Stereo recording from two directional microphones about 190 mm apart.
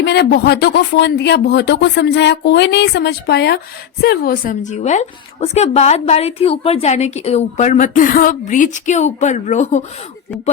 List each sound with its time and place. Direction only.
0.0 s a woman's voice: 60° left (ahead or behind); by 9.8 s 35° left (ahead or behind)